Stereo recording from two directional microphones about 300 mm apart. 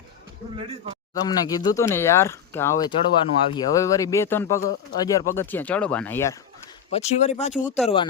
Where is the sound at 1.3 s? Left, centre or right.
Centre.